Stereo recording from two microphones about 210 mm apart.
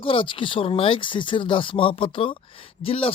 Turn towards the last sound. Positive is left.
turn(degrees=25)  # may be behind; listen again after turning